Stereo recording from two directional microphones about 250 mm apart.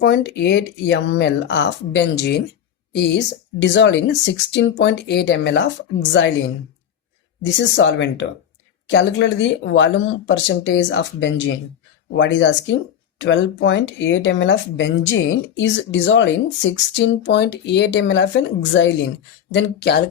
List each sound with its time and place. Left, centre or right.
0.0 s speech: left
7.4 s speech: left